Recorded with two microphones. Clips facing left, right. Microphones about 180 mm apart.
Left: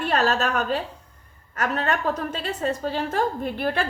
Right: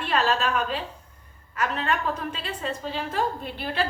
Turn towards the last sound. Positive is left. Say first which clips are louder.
# left 4 dB
turn(degrees=50)  # may be behind; listen again after turning